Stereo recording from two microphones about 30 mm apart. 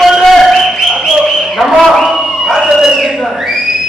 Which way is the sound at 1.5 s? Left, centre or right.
Centre.